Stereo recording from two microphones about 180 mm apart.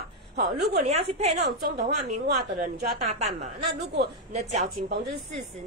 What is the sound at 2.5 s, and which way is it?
A woman's voice, 45° right (ahead or behind).